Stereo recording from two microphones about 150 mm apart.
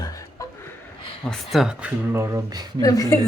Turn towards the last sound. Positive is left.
turn(degrees=25)  # may be behind; listen again after turning